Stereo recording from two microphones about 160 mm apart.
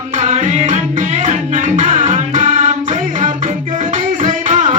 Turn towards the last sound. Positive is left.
turn(degrees=-50)  # may be behind; listen again after turning